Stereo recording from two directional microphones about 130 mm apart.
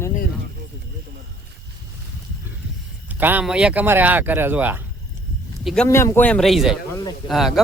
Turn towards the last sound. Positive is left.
turn(degrees=0)  # may be behind; listen again after turning